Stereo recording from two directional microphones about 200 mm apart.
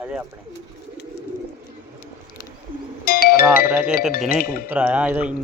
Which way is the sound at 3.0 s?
50° left (ahead or behind).